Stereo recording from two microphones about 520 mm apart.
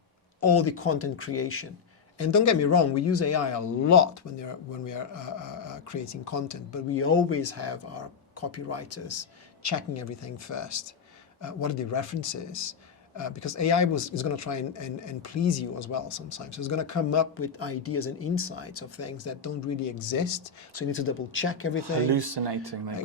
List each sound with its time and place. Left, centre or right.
0.4 s speech: left
20.7 s speech: left
21.8 s speech: right